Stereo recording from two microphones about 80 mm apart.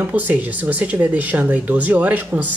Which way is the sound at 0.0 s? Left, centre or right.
Right.